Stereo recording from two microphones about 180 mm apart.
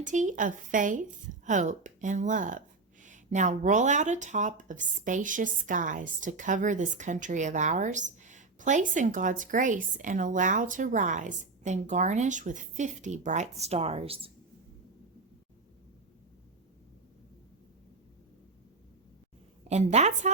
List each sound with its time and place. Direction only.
0.0 s speech: 45° right (ahead or behind)
19.6 s a woman's voice: 40° right (ahead or behind)